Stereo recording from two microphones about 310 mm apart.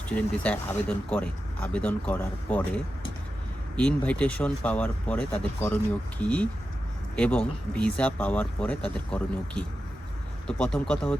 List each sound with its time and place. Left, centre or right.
0.1 s speech: centre